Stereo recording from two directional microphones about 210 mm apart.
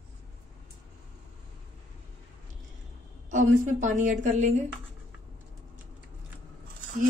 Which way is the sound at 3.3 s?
35° right (ahead or behind).